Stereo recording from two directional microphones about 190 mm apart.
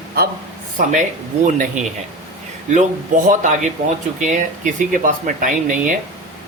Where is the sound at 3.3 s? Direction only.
40° right (ahead or behind).